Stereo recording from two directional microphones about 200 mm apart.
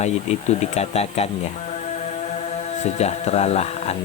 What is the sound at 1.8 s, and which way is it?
Music, 35° left (ahead or behind).